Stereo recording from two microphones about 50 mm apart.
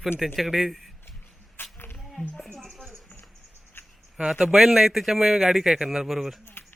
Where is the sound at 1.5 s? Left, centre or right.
Left.